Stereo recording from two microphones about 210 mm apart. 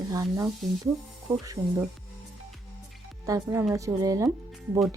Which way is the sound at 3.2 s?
15° right (ahead or behind).